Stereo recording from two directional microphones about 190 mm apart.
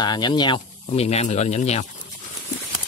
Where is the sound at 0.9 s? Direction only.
35° left (ahead or behind).